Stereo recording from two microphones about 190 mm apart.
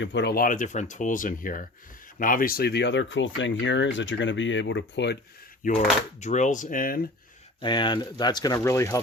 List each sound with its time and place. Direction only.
0.0 s speech: 65° left (ahead or behind)
5.6 s speech: 40° left (ahead or behind)
7.6 s speech: 25° left (ahead or behind)